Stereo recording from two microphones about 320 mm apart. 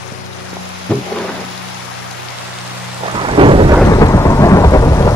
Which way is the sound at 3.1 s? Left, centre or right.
Centre.